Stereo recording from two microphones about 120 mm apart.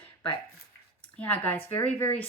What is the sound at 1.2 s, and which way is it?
Speech, 15° left (ahead or behind).